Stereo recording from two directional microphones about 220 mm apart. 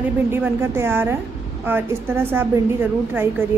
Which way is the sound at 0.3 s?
10° right (ahead or behind).